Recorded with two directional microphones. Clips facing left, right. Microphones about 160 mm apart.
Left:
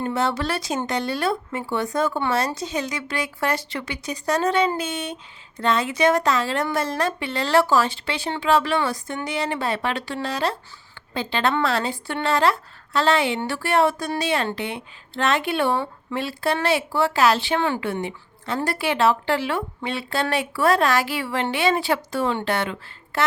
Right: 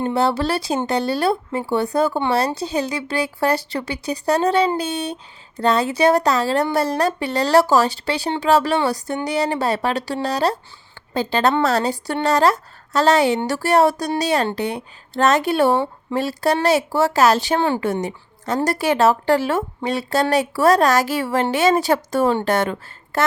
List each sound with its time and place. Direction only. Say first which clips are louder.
0.0 s speech: right 4 dB; 30° right (ahead or behind)